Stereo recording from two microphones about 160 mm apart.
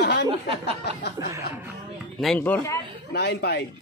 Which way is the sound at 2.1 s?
5° left (ahead or behind).